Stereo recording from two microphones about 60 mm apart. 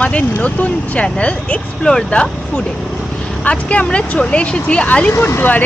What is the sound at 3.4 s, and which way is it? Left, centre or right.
Speech, left.